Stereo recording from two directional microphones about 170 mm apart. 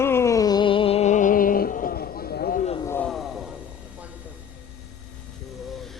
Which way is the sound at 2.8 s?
15° left (ahead or behind).